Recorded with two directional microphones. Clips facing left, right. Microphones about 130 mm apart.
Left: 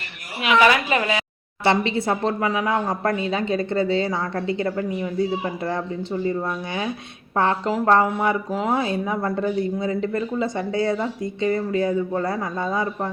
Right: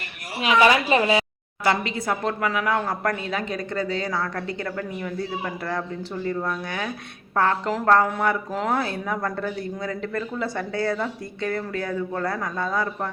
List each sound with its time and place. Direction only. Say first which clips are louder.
0.4 s a woman's voice: left 1 dB; 30° right (ahead or behind)
1.6 s speech: left 3 dB; 25° left (ahead or behind)